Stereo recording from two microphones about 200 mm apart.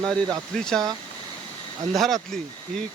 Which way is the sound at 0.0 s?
Centre (ahead or behind).